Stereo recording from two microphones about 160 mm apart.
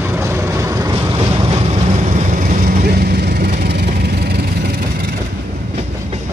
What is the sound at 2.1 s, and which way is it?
Vehicle, 60° right (ahead or behind).